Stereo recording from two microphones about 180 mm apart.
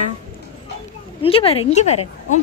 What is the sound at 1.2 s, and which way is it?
Speech, 30° left (ahead or behind).